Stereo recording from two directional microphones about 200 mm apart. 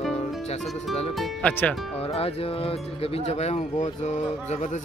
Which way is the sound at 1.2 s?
5° left (ahead or behind).